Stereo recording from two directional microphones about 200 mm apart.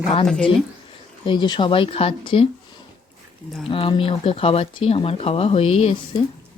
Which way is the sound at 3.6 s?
25° left (ahead or behind).